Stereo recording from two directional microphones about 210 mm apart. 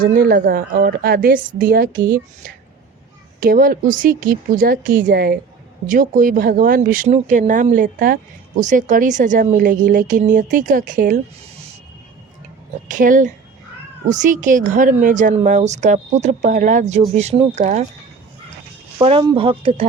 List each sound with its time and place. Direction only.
0.0 s a woman's voice: 40° right (ahead or behind)
12.9 s speech: 40° right (ahead or behind)
19.0 s speech: 25° right (ahead or behind)